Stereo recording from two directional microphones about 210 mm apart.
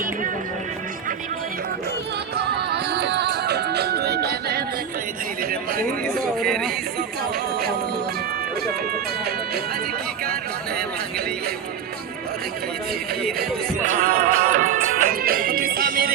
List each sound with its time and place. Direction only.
2.3 s music: 50° right (ahead or behind)
5.4 s speech: 45° right (ahead or behind)
6.4 s speech: centre (ahead or behind)
13.2 s speech: 45° right (ahead or behind)